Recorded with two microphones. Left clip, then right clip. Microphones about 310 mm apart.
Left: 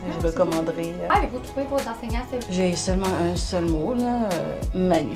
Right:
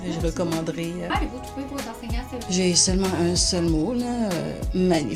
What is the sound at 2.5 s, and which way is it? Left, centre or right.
Speech, right.